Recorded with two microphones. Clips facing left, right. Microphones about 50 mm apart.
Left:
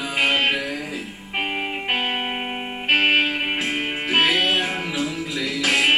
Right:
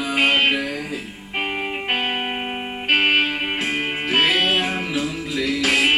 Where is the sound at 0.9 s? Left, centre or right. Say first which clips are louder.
Right 1 dB; centre.